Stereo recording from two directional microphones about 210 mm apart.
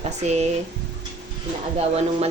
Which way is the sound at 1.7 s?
30° right (ahead or behind).